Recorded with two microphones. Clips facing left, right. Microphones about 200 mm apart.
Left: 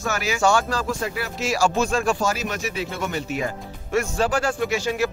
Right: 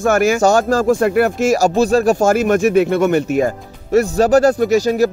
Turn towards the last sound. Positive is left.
turn(degrees=-40)  # may be behind; listen again after turning